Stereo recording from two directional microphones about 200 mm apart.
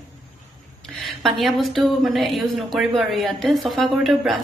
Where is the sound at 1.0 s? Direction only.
Centre (ahead or behind).